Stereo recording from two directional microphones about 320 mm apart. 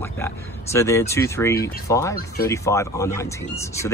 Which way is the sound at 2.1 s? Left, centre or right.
Left.